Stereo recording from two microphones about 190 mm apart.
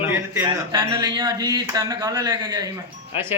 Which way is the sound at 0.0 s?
10° right (ahead or behind).